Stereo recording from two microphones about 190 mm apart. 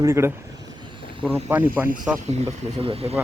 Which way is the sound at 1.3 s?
10° right (ahead or behind).